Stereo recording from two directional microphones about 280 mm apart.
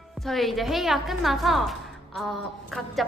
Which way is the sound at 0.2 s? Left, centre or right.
Centre.